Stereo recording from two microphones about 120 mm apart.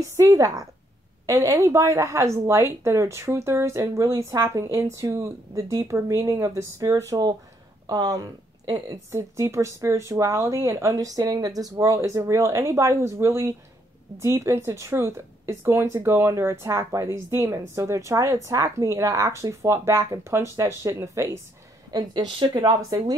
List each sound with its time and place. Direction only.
0.0 s a woman's voice: 30° right (ahead or behind)
9.1 s a woman's voice: 25° right (ahead or behind)